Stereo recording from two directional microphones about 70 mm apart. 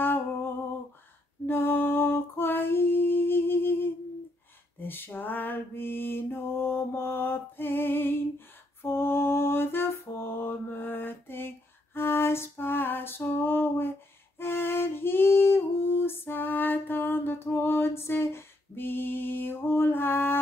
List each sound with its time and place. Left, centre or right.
1.4 s female singing: left
4.7 s mantra: left
14.4 s music: left